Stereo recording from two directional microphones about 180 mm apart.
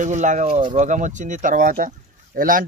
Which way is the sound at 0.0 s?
45° right (ahead or behind).